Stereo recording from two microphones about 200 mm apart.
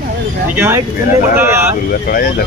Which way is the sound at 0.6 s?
10° right (ahead or behind).